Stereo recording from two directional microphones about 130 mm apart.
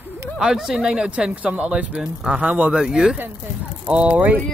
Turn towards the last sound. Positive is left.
turn(degrees=-10)  # may be behind; listen again after turning